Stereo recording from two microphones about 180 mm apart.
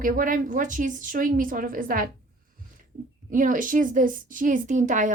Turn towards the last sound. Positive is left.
turn(degrees=-45)  # may be behind; listen again after turning